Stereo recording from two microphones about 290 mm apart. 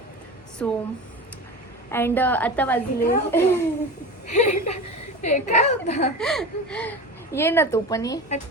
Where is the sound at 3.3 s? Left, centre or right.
Centre.